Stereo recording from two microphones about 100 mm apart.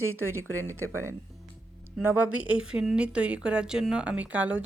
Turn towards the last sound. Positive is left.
turn(degrees=-15)  # may be behind; listen again after turning